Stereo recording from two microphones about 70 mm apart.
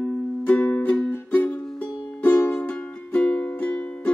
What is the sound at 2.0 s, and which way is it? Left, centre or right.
Music, left.